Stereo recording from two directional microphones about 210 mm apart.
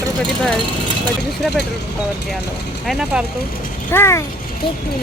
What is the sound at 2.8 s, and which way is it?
Speech, centre (ahead or behind).